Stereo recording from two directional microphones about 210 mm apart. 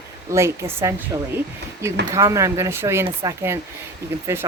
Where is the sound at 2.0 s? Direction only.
15° right (ahead or behind).